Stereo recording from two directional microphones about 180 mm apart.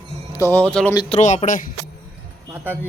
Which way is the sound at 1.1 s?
40° left (ahead or behind).